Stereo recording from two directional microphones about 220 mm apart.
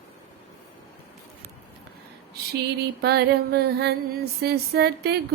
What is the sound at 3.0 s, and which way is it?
Music, 45° right (ahead or behind).